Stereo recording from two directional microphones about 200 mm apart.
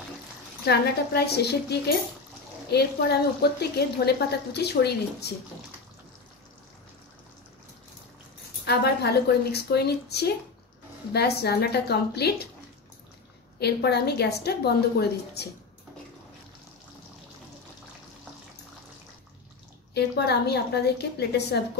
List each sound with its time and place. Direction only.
0.7 s a woman's voice: 55° left (ahead or behind)
8.6 s a woman's voice: 55° left (ahead or behind)
13.6 s a woman's voice: 55° left (ahead or behind)
19.9 s a woman's voice: 55° left (ahead or behind)